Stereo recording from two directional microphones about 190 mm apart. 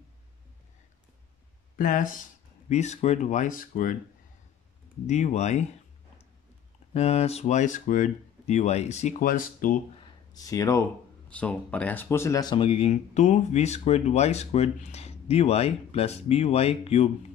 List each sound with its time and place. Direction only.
1.8 s speech: 45° left (ahead or behind)
5.0 s speech: 40° left (ahead or behind)
6.9 s speech: 35° left (ahead or behind)
10.3 s speech: 20° left (ahead or behind)